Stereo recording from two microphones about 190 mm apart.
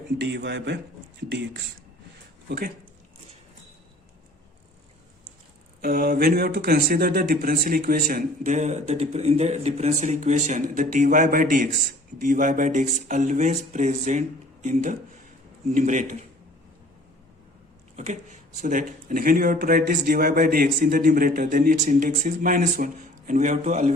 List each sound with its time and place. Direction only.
0.2 s a man's voice: 65° right (ahead or behind)
2.5 s a man's voice: 55° right (ahead or behind)
5.8 s speech: 50° right (ahead or behind)
17.9 s speech: 40° right (ahead or behind)